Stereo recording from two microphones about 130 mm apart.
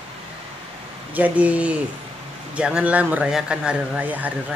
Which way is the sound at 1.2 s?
10° right (ahead or behind).